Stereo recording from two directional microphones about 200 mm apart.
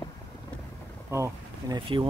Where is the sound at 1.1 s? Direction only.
15° right (ahead or behind).